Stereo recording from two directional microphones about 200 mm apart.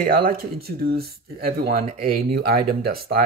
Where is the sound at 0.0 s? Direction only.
45° right (ahead or behind).